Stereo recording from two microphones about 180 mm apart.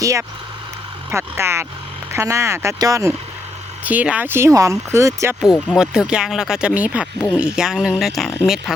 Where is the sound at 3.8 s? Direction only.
10° right (ahead or behind).